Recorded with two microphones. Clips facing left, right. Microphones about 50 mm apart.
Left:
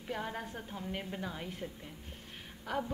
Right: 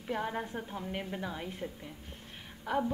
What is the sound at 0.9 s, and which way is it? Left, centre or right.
Speech, centre.